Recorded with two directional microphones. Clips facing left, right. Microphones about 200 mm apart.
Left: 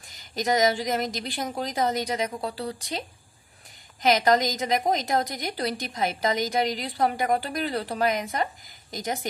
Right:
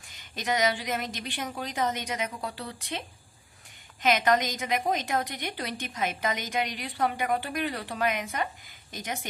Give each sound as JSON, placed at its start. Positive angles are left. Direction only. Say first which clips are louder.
{"t": 0.1, "sound": "a woman's voice", "louder": "left 5 dB", "side_deg": 40}
{"t": 4.0, "sound": "a woman's voice", "louder": "left 3 dB", "side_deg": 35}